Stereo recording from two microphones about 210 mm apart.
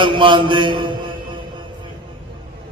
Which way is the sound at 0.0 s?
25° right (ahead or behind).